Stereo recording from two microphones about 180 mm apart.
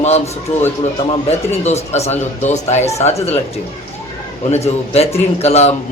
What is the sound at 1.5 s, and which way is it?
Speech, 35° left (ahead or behind).